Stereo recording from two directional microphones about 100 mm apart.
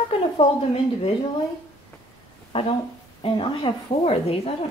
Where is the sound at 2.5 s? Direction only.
90° left.